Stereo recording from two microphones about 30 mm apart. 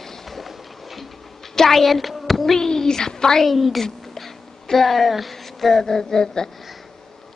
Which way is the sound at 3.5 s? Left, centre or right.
Centre.